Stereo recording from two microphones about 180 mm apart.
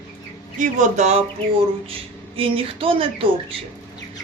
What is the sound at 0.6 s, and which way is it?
Speech, 40° right (ahead or behind).